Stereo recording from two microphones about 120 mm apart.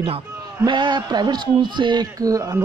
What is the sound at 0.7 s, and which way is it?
Speech, 40° right (ahead or behind).